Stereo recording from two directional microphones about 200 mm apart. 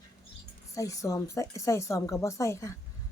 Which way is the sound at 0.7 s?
15° left (ahead or behind).